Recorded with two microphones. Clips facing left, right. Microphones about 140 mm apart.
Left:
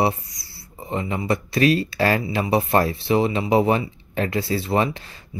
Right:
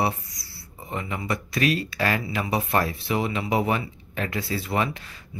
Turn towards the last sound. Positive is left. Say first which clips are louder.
# left 5 dB
turn(degrees=30)  # may be behind; listen again after turning